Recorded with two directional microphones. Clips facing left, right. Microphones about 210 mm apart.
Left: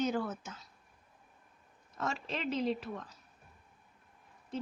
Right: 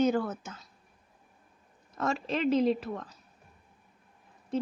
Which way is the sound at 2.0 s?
55° right (ahead or behind).